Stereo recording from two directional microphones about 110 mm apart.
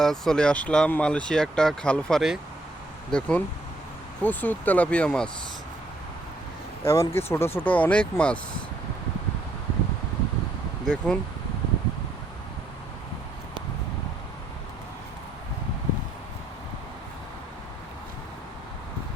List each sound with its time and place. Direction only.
0.0 s speech: 5° left (ahead or behind)
6.8 s speech: 25° left (ahead or behind); by 8.4 s 10° left (ahead or behind)
10.8 s speech: 10° left (ahead or behind)